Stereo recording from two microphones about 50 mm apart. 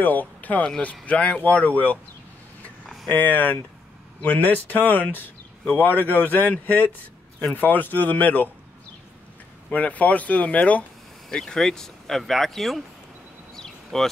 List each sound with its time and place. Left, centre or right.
0.0 s speech: left
3.1 s speech: left
9.7 s speech: left
11.2 s speech: centre
13.9 s speech: centre